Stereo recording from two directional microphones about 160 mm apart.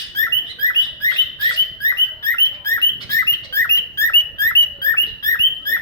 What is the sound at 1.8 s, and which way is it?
Bird, 20° left (ahead or behind).